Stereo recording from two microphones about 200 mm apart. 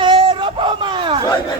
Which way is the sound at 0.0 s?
25° right (ahead or behind).